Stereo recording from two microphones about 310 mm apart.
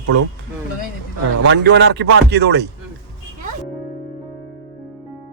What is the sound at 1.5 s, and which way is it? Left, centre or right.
Speech, right.